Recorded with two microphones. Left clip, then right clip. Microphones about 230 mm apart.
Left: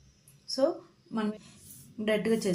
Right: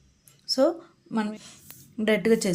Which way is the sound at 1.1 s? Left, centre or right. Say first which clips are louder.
Right 4 dB; right.